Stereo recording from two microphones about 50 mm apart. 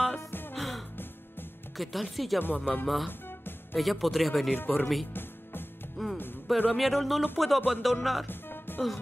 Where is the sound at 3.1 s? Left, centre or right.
Left.